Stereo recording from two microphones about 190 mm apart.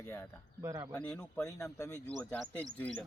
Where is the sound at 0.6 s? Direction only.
15° right (ahead or behind).